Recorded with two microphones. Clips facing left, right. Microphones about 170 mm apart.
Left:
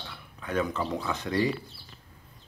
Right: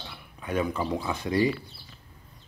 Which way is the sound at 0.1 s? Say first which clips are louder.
Right 1 dB; 10° right (ahead or behind).